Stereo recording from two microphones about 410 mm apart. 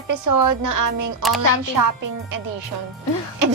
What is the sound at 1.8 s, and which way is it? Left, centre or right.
Speech, right.